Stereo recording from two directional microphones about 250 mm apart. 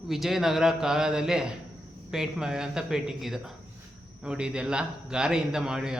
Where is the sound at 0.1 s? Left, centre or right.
Centre.